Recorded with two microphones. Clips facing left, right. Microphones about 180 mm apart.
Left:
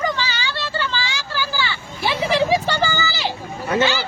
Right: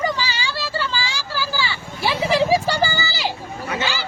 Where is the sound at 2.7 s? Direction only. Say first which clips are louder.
Even; 35° right (ahead or behind).